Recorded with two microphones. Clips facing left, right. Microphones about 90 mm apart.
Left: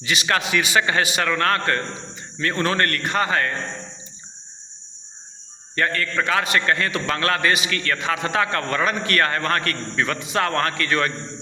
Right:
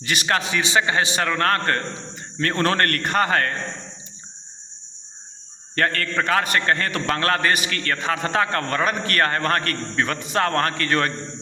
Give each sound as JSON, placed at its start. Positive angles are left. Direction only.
{"t": 0.0, "sound": "a man's voice", "side_deg": -45}
{"t": 0.3, "sound": "a man's voice", "side_deg": -30}
{"t": 5.7, "sound": "a man's voice", "side_deg": -55}